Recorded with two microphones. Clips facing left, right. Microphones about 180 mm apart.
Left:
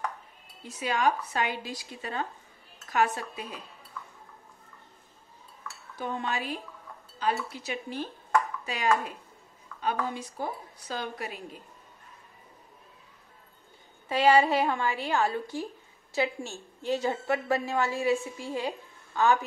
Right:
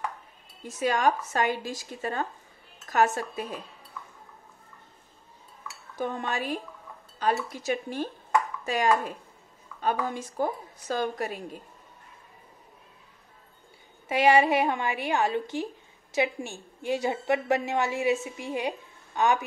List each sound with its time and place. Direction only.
0.7 s a woman's voice: 45° right (ahead or behind)
5.9 s a woman's voice: 50° right (ahead or behind)
9.8 s a woman's voice: 45° right (ahead or behind)
14.0 s a woman's voice: 15° right (ahead or behind)